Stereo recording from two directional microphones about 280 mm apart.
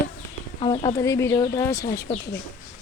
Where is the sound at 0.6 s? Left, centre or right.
Centre.